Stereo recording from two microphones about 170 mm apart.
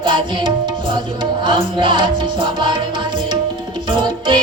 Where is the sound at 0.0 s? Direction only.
30° right (ahead or behind).